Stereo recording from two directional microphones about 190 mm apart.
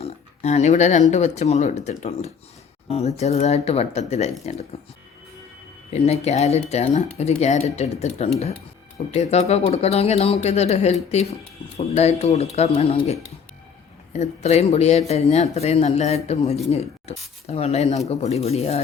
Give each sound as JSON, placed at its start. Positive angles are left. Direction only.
{"t": 0.0, "sound": "a sound", "side_deg": 35}
{"t": 1.1, "sound": "speech", "side_deg": 35}
{"t": 5.9, "sound": "speech", "side_deg": 35}